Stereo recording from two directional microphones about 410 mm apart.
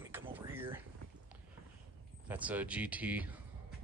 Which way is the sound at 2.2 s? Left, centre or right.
Centre.